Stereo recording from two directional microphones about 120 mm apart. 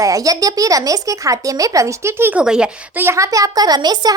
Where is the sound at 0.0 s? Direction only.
30° right (ahead or behind).